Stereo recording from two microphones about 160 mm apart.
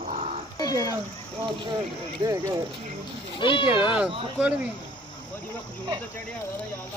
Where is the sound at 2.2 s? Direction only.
20° right (ahead or behind).